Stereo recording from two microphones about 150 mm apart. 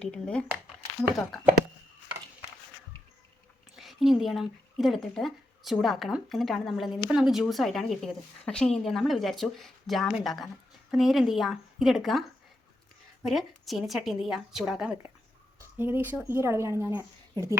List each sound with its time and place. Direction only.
0.0 s a woman's voice: 5° left (ahead or behind)
3.8 s a woman's voice: centre (ahead or behind)
13.2 s a woman's voice: centre (ahead or behind); by 17.6 s 20° right (ahead or behind)